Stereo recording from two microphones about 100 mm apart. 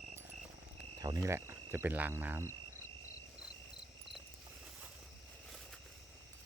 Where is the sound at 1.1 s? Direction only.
30° right (ahead or behind).